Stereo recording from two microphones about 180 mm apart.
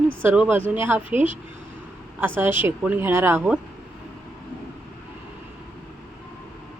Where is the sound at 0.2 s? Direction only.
10° right (ahead or behind).